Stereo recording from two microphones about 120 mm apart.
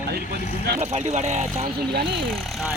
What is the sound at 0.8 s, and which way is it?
Speech, 70° right (ahead or behind).